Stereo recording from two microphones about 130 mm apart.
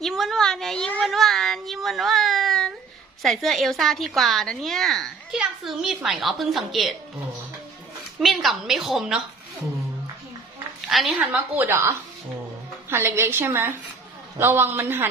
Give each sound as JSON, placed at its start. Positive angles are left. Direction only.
{"t": 0.0, "sound": "a sound", "side_deg": 0}
{"t": 3.2, "sound": "a woman's voice", "side_deg": 0}
{"t": 8.2, "sound": "a woman's voice", "side_deg": 0}
{"t": 10.8, "sound": "a woman's voice", "side_deg": 0}